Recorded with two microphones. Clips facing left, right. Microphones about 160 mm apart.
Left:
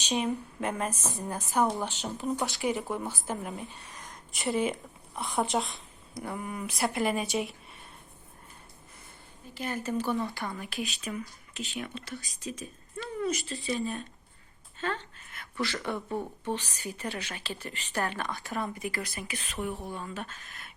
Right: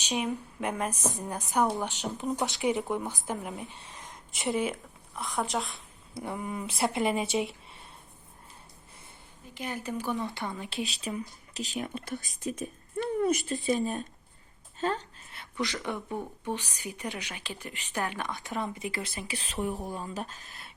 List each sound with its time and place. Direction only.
0.0 s a woman's voice: 10° right (ahead or behind)
4.5 s a woman's voice: 5° right (ahead or behind)
6.1 s speech: 20° right (ahead or behind)
9.6 s a woman's voice: 15° right (ahead or behind)
10.8 s speech: 35° right (ahead or behind)
14.8 s a sound: 40° right (ahead or behind)
15.5 s a woman's voice: 15° right (ahead or behind); by 20.7 s 35° right (ahead or behind)